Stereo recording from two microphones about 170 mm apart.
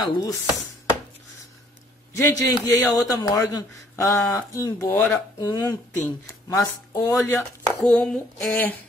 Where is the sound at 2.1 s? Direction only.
15° left (ahead or behind).